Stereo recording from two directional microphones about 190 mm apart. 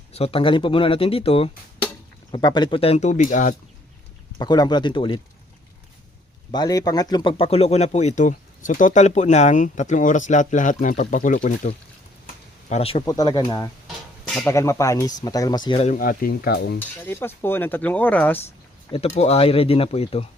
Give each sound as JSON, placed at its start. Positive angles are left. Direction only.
{"t": 0.1, "sound": "speech", "side_deg": 30}
{"t": 4.4, "sound": "speech", "side_deg": 20}
{"t": 6.5, "sound": "speech", "side_deg": 20}
{"t": 12.2, "sound": "a sound", "side_deg": 40}
{"t": 13.1, "sound": "speech", "side_deg": 20}
{"t": 13.8, "sound": "a sound", "side_deg": 0}
{"t": 14.4, "sound": "speech", "side_deg": 15}
{"t": 16.0, "sound": "stir", "side_deg": 50}
{"t": 16.8, "sound": "speech", "side_deg": 10}
{"t": 18.9, "sound": "speech", "side_deg": 35}